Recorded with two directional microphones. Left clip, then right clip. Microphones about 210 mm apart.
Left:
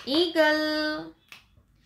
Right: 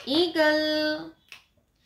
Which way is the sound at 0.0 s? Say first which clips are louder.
Even; centre (ahead or behind).